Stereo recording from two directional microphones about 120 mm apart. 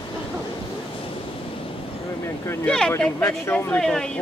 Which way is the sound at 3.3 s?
20° left (ahead or behind).